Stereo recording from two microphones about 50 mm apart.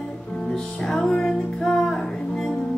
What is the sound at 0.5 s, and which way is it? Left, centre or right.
Music, centre.